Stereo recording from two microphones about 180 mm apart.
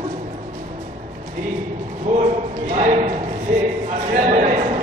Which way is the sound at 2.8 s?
40° right (ahead or behind).